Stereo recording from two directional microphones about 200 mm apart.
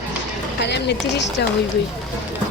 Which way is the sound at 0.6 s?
60° left (ahead or behind).